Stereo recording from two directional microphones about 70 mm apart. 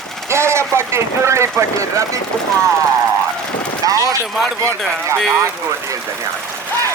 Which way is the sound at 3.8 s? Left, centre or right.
Right.